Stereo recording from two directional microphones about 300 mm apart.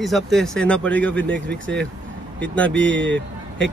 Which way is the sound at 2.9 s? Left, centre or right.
Right.